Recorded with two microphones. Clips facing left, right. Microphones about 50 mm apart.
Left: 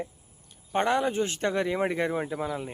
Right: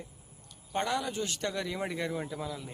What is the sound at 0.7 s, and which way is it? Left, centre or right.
Speech, left.